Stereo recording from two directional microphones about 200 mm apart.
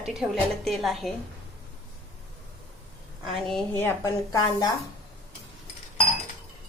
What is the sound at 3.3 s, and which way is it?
A woman's voice, centre (ahead or behind).